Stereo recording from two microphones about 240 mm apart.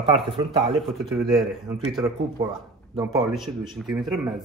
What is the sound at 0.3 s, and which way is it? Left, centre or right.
Speech, right.